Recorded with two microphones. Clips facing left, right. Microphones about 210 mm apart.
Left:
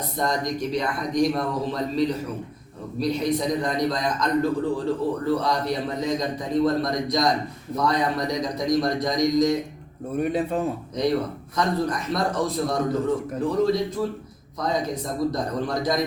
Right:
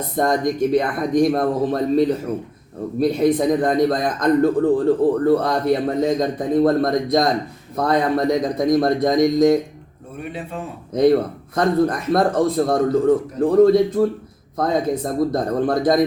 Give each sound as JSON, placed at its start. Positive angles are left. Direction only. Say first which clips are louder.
{"t": 0.2, "sound": "speech", "louder": "right 7 dB", "side_deg": -55}
{"t": 10.2, "sound": "a man's voice", "louder": "left 6 dB", "side_deg": 40}
{"t": 10.9, "sound": "speech", "louder": "right 10 dB", "side_deg": -55}